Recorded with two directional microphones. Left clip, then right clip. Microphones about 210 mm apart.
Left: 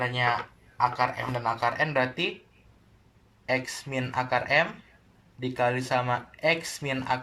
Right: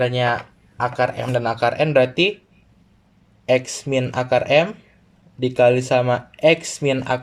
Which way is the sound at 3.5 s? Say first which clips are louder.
Right 10 dB; 50° right (ahead or behind).